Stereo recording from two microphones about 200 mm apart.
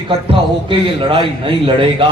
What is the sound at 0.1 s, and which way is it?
A man's voice, 25° right (ahead or behind).